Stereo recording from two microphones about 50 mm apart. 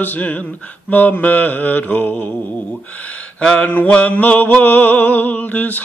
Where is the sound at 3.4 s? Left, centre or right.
Centre.